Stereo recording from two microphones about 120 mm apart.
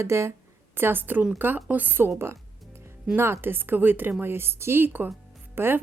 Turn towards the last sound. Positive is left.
turn(degrees=-20)  # may be behind; listen again after turning